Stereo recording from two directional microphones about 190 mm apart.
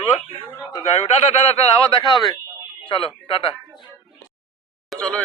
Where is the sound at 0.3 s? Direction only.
30° left (ahead or behind).